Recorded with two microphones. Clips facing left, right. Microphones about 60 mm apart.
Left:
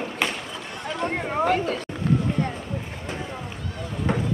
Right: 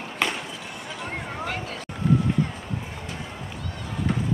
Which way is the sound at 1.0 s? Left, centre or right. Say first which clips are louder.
Left 9 dB; left.